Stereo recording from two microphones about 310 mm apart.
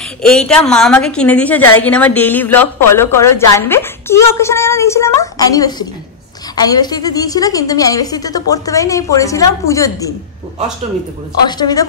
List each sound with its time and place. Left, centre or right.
0.2 s a woman's voice: centre
11.4 s a woman's voice: centre